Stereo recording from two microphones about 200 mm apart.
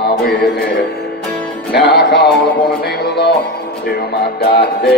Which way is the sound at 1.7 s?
55° left (ahead or behind).